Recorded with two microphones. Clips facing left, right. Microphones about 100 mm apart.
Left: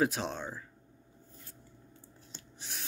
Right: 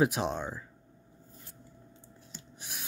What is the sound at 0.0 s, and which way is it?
Speech, 15° right (ahead or behind).